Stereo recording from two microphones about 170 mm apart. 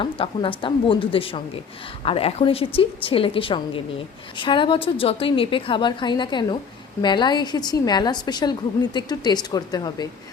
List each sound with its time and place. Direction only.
0.0 s a woman's voice: 30° left (ahead or behind)